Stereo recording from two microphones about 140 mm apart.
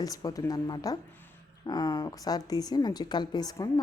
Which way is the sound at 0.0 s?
25° left (ahead or behind).